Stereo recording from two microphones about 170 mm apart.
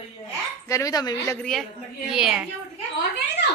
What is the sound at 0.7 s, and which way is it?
Speech, 20° left (ahead or behind).